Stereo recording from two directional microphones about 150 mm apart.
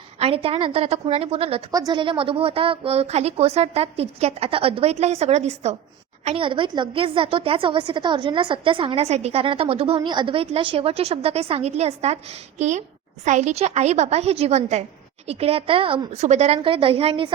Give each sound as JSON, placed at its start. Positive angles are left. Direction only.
{"t": 0.2, "sound": "a woman's voice", "side_deg": -40}
{"t": 1.7, "sound": "a woman's voice", "side_deg": -25}
{"t": 6.2, "sound": "a woman's voice", "side_deg": -35}